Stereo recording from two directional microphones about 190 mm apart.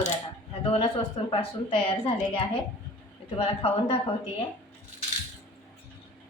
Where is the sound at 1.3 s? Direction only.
30° left (ahead or behind).